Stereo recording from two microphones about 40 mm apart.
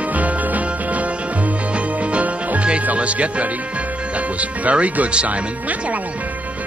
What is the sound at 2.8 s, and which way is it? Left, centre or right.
Speech, right.